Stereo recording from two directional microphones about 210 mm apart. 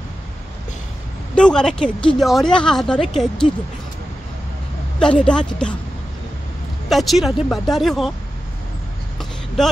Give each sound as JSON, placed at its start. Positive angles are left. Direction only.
{"t": 1.3, "sound": "a woman's voice", "side_deg": 5}
{"t": 4.9, "sound": "a woman's voice", "side_deg": 5}
{"t": 6.9, "sound": "a woman's voice", "side_deg": 0}